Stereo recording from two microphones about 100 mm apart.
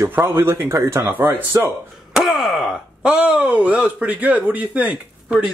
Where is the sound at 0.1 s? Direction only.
20° right (ahead or behind).